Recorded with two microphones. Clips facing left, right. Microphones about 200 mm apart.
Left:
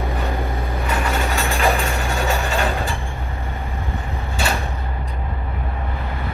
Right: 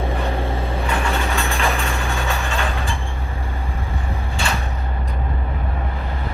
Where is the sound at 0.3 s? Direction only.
30° right (ahead or behind).